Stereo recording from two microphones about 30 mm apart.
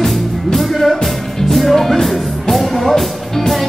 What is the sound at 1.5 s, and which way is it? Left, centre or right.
Music, centre.